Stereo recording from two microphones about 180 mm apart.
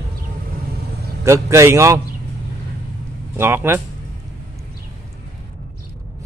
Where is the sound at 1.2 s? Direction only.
15° right (ahead or behind).